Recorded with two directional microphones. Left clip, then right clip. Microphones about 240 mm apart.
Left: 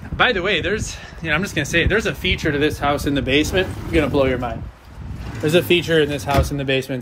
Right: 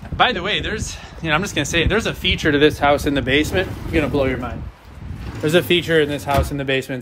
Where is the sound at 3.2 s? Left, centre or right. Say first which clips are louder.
Left 2 dB; centre.